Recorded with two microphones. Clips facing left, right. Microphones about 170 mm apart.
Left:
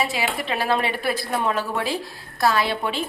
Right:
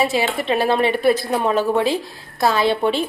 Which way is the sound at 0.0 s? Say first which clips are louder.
Right 5 dB; 25° right (ahead or behind).